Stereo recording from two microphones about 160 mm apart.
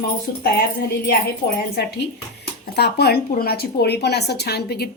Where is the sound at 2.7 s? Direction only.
90° left.